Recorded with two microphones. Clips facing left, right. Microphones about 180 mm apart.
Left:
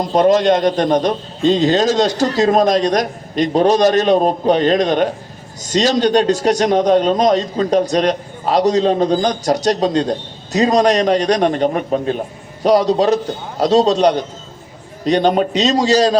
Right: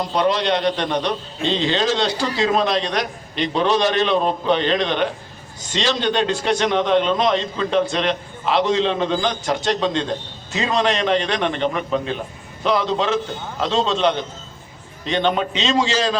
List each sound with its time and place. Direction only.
0.0 s a man's voice: 45° left (ahead or behind)